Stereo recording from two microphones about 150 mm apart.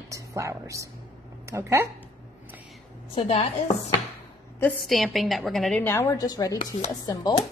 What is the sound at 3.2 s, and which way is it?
Speech, 50° left (ahead or behind).